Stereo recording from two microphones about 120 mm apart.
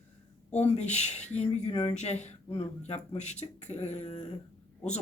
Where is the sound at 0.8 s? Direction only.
70° left (ahead or behind).